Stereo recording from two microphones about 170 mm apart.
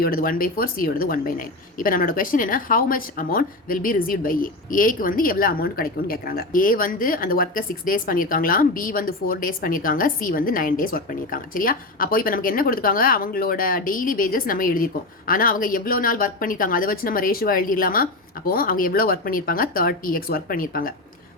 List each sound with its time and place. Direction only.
0.0 s speech: 60° left (ahead or behind)